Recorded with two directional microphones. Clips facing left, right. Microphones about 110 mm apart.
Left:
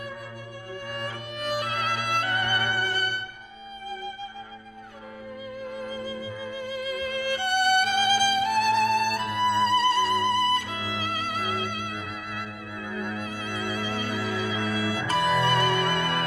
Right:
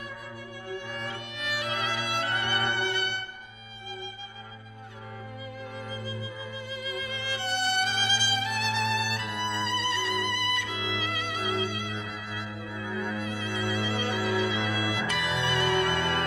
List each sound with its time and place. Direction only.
0.7 s violin: 45° left (ahead or behind)
6.0 s music: 50° left (ahead or behind)
9.4 s music: 10° left (ahead or behind)
9.7 s music: 45° left (ahead or behind)